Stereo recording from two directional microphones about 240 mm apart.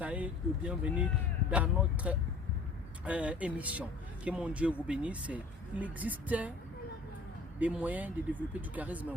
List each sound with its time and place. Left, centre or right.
0.0 s speech: centre
7.6 s speech: centre